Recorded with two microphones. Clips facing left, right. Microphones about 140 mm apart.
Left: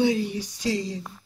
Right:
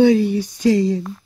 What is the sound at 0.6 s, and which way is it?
Speech, 55° right (ahead or behind).